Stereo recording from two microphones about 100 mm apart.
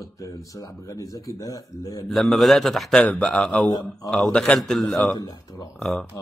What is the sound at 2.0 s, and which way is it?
A man's voice, centre (ahead or behind).